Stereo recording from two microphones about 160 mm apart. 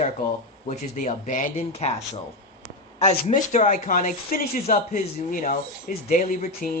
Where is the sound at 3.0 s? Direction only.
45° left (ahead or behind).